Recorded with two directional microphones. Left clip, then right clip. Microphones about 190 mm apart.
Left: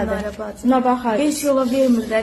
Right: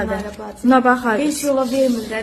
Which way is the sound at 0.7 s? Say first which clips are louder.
Right 3 dB; 35° right (ahead or behind).